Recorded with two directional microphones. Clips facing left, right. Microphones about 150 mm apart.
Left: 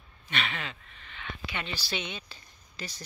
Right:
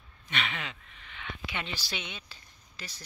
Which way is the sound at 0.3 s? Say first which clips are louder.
Left 1 dB; 15° right (ahead or behind).